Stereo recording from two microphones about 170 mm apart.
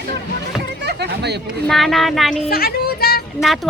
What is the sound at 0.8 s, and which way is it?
Speech, 80° right.